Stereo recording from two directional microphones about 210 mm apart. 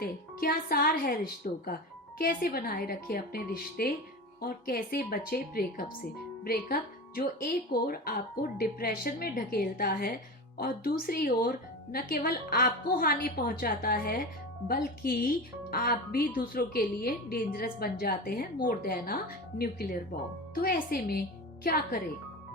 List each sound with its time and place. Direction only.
0.0 s a woman's voice: 45° left (ahead or behind)